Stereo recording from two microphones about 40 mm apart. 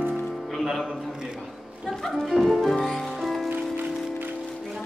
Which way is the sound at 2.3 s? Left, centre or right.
Centre.